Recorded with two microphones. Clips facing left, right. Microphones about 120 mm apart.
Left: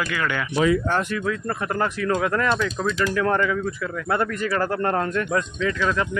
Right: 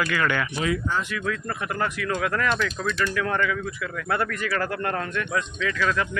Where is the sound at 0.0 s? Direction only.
10° left (ahead or behind).